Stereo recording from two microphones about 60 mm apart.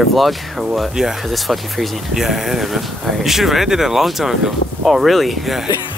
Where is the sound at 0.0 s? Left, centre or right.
Centre.